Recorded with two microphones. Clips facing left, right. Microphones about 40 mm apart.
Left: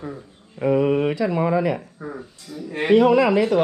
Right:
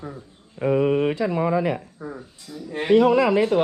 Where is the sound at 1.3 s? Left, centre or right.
Left.